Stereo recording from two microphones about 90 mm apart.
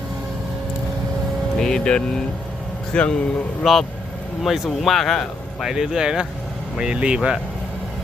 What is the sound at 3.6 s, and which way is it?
Speech, centre (ahead or behind).